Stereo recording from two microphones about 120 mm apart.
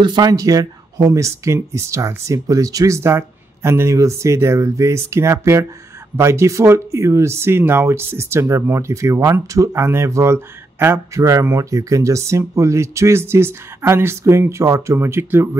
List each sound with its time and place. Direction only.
0.0 s speech: 35° right (ahead or behind); by 15.5 s 20° right (ahead or behind)